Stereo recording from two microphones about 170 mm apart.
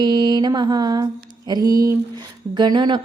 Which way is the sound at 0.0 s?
25° right (ahead or behind).